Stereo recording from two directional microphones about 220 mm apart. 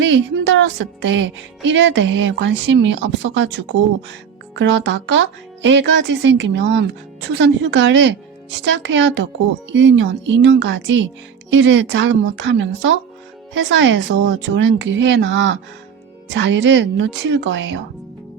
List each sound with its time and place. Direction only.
0.0 s speech: 55° right (ahead or behind)